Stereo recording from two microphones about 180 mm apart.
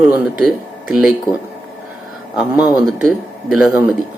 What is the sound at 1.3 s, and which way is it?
Speech, 20° left (ahead or behind).